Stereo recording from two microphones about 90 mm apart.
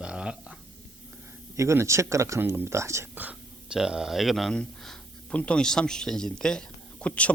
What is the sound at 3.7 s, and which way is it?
Speech, 5° right (ahead or behind).